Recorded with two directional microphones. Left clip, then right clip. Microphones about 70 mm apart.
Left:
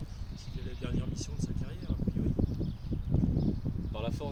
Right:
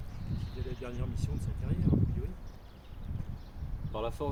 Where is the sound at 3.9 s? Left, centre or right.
Right.